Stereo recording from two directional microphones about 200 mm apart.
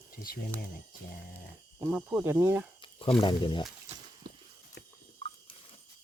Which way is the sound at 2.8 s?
25° left (ahead or behind).